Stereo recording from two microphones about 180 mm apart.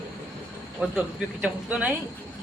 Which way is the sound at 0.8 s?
5° right (ahead or behind).